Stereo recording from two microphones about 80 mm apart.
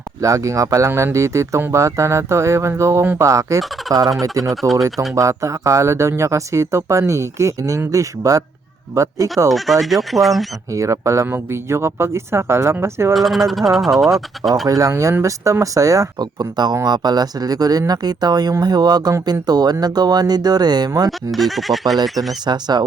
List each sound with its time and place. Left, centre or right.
0.2 s speech: right
9.5 s speech: centre
10.7 s speech: right
13.1 s speech: centre
14.7 s speech: right
21.3 s speech: centre
22.3 s speech: right